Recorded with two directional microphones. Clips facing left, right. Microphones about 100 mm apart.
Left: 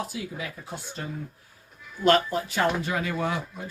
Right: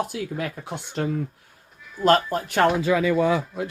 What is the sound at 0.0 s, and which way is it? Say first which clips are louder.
Speech: right 6 dB; 55° right (ahead or behind).